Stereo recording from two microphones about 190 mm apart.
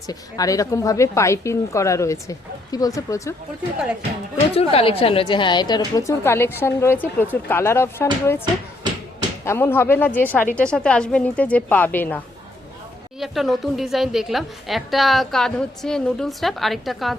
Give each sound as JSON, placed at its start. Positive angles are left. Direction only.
{"t": 0.1, "sound": "a woman's voice", "side_deg": 20}
{"t": 4.5, "sound": "a woman's voice", "side_deg": 30}
{"t": 9.4, "sound": "a woman's voice", "side_deg": 15}
{"t": 13.1, "sound": "a woman's voice", "side_deg": 0}